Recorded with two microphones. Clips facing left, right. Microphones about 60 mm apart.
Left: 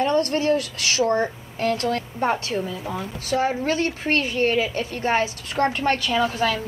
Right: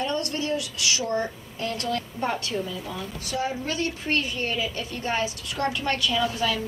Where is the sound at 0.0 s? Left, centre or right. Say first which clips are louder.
Left 7 dB; left.